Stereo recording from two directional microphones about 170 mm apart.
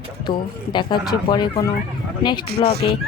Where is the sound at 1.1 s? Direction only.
25° left (ahead or behind).